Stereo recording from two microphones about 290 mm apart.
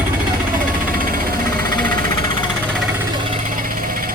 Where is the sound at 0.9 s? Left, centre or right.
Right.